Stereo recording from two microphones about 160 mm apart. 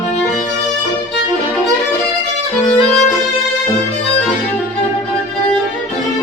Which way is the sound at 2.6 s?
Centre (ahead or behind).